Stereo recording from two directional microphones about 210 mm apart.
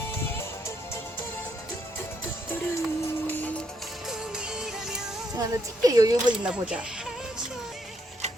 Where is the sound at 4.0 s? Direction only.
Centre (ahead or behind).